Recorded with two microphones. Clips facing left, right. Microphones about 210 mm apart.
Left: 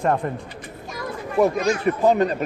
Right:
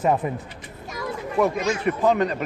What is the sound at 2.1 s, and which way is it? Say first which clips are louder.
Speech: left 2 dB; 35° left (ahead or behind).